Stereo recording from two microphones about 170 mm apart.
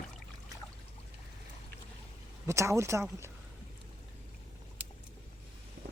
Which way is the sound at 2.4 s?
15° right (ahead or behind).